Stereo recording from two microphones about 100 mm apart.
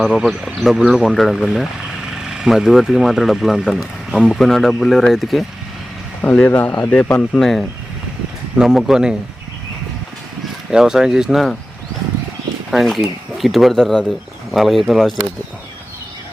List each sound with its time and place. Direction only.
0.0 s speech: 5° right (ahead or behind)
6.2 s speech: 15° left (ahead or behind)
7.2 s speech: 5° left (ahead or behind)
10.7 s speech: 5° right (ahead or behind)
12.7 s speech: centre (ahead or behind)